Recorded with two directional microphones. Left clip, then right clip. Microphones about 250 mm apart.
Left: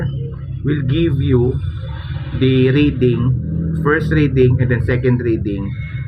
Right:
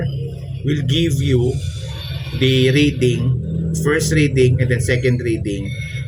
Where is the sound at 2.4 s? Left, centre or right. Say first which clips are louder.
Left 1 dB; right.